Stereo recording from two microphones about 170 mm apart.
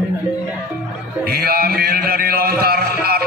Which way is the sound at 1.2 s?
65° right (ahead or behind).